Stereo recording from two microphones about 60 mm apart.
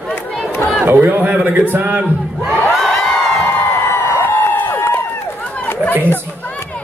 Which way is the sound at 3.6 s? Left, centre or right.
Left.